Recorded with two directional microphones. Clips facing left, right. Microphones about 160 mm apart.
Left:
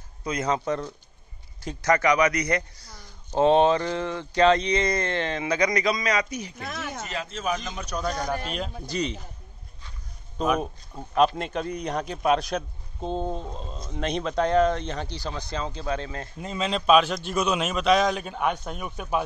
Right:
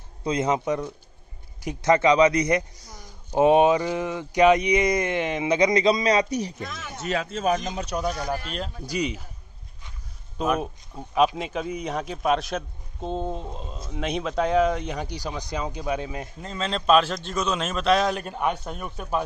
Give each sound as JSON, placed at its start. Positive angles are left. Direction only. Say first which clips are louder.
{"t": 0.2, "sound": "speech", "louder": "right 3 dB", "side_deg": -25}
{"t": 7.1, "sound": "speech", "louder": "right 7 dB", "side_deg": -55}
{"t": 7.7, "sound": "speech", "louder": "right 3 dB", "side_deg": -25}
{"t": 8.0, "sound": "speech", "louder": "left 2 dB", "side_deg": -5}
{"t": 8.8, "sound": "speech", "louder": "right 2 dB", "side_deg": -10}
{"t": 10.3, "sound": "speech", "louder": "even", "side_deg": -5}
{"t": 16.3, "sound": "a man's voice", "louder": "left 3 dB", "side_deg": 10}
{"t": 17.3, "sound": "speech", "louder": "left 1 dB", "side_deg": 15}